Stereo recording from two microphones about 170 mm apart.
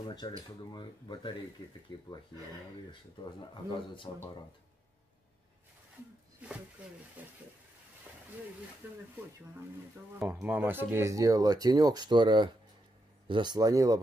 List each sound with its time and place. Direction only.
0.0 s a sound: 25° left (ahead or behind)
0.7 s speech: 25° left (ahead or behind)
4.1 s speech: 30° left (ahead or behind)
7.2 s speech: 10° right (ahead or behind)
10.1 s speech: 10° right (ahead or behind)